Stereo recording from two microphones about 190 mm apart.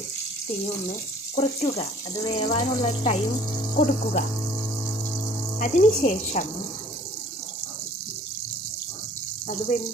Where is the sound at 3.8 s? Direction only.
35° left (ahead or behind).